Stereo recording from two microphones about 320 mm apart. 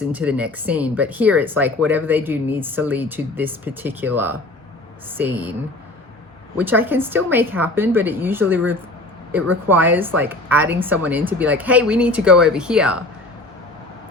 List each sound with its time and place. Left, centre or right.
0.1 s speech: centre
6.6 s a woman's voice: centre